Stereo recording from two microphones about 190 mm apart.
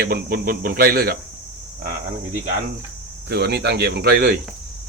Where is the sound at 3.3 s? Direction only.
60° right (ahead or behind).